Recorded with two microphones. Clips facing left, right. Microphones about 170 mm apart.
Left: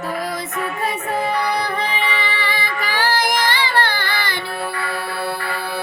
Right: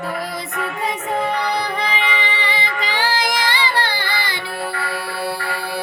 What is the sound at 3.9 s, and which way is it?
Child singing, 15° right (ahead or behind).